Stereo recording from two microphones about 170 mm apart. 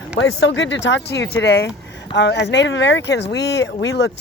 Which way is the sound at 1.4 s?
75° left (ahead or behind).